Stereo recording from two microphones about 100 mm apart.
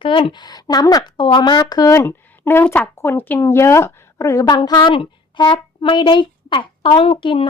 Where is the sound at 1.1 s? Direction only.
55° left (ahead or behind); by 2.1 s 35° left (ahead or behind).